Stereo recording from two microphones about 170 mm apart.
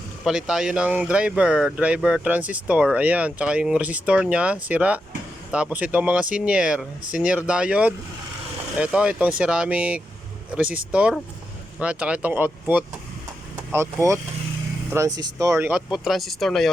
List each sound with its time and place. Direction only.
0.3 s speech: 5° right (ahead or behind)
15.9 s speech: centre (ahead or behind)